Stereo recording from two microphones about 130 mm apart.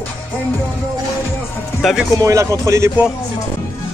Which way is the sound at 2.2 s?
25° right (ahead or behind).